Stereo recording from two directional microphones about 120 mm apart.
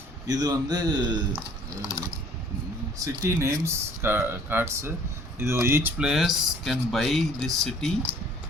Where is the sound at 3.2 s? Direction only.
25° right (ahead or behind).